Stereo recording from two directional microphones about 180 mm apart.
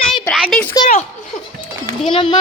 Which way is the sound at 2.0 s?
30° left (ahead or behind).